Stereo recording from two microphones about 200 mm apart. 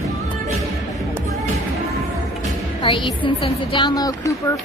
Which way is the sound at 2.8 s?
25° left (ahead or behind).